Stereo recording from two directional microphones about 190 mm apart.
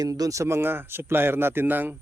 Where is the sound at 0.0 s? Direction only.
20° right (ahead or behind).